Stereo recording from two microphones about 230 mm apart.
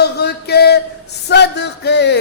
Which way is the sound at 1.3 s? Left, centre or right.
Left.